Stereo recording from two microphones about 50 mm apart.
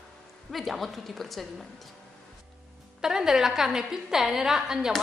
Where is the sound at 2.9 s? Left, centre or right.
Centre.